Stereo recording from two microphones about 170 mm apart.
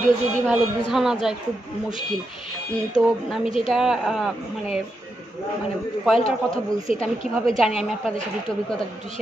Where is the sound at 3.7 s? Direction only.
Centre (ahead or behind).